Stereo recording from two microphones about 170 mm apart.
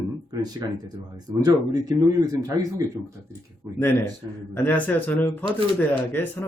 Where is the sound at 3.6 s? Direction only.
15° right (ahead or behind).